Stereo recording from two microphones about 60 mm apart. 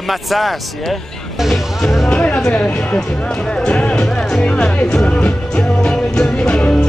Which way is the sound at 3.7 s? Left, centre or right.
Centre.